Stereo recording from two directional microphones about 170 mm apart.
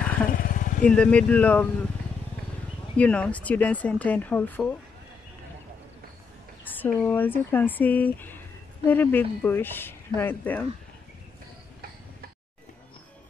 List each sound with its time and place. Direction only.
0.3 s vehicle: 55° left (ahead or behind)
0.8 s speech: 5° left (ahead or behind)
3.0 s speech: 10° left (ahead or behind)
6.6 s speech: 10° left (ahead or behind)